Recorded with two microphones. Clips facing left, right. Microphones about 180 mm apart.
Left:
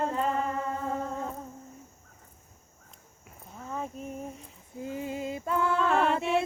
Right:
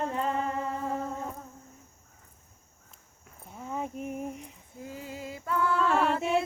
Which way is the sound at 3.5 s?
15° right (ahead or behind).